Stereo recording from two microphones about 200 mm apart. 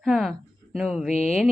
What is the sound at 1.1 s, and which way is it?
Speech, 35° left (ahead or behind).